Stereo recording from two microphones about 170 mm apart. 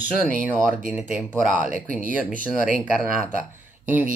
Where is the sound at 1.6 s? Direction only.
50° right (ahead or behind).